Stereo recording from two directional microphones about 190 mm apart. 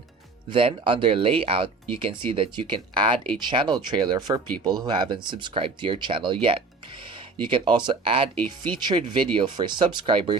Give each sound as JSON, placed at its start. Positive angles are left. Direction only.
{"t": 0.5, "sound": "speech", "side_deg": -25}